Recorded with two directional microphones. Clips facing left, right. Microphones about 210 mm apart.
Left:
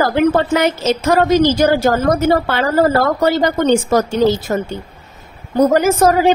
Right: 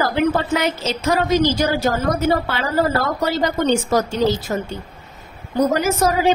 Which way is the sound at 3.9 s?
55° left (ahead or behind).